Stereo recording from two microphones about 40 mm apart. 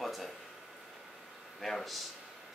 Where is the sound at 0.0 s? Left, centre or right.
Centre.